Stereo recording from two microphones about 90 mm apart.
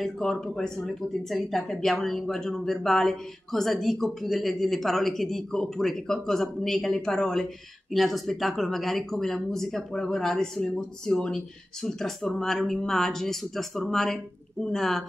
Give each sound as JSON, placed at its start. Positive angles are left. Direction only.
{"t": 0.0, "sound": "speech", "side_deg": 5}